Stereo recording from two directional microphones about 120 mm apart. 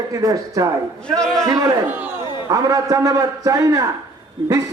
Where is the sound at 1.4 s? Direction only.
30° right (ahead or behind).